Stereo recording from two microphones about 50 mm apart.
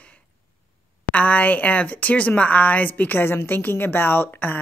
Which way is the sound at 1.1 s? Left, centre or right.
Left.